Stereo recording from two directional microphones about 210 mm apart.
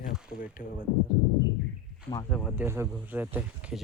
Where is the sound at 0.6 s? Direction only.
40° left (ahead or behind).